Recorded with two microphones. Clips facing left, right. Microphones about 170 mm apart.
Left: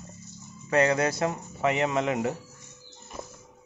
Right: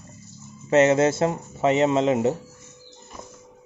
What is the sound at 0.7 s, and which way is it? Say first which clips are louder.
Speech: right 6 dB; 25° right (ahead or behind).